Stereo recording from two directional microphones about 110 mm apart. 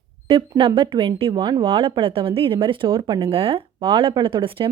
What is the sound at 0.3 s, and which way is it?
A woman's voice, 55° right (ahead or behind).